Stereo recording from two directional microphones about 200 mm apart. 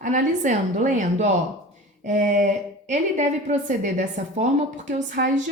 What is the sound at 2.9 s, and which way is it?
A woman's voice, 35° right (ahead or behind).